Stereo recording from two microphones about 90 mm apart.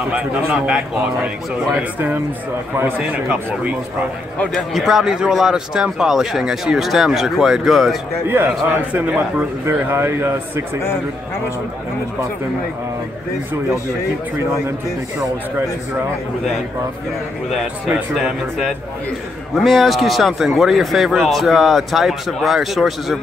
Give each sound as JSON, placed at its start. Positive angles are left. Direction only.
{"t": 0.1, "sound": "a man's voice", "side_deg": -10}
{"t": 4.7, "sound": "speech", "side_deg": 0}
{"t": 8.3, "sound": "speech", "side_deg": -20}
{"t": 18.1, "sound": "speech", "side_deg": 0}